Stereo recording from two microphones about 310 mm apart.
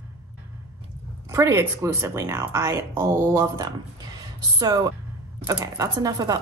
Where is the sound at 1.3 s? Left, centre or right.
Centre.